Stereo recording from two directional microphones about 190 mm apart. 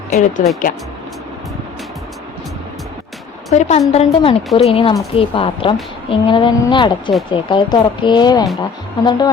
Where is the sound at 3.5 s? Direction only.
40° left (ahead or behind).